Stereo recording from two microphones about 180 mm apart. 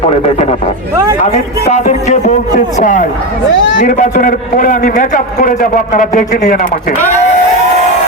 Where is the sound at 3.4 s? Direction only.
85° left.